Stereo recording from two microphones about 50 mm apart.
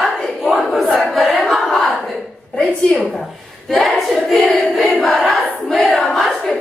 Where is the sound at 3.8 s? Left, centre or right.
Centre.